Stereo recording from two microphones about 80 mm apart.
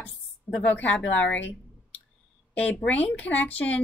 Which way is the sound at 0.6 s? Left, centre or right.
Centre.